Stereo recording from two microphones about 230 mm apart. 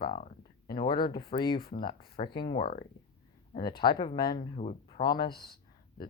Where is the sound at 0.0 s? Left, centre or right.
Left.